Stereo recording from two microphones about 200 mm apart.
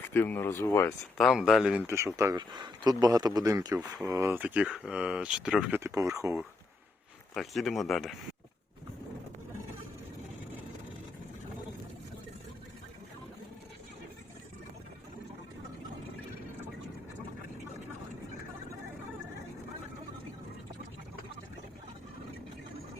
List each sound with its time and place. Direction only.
0.1 s speech: 10° left (ahead or behind)
1.2 s speech: centre (ahead or behind)
1.9 s speech: 15° right (ahead or behind)
5.8 s speech: 15° right (ahead or behind)
7.3 s speech: centre (ahead or behind)